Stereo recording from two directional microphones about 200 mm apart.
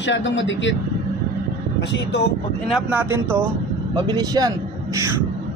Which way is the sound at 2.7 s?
10° right (ahead or behind).